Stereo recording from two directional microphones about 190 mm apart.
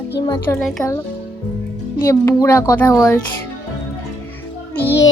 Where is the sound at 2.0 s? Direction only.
15° left (ahead or behind).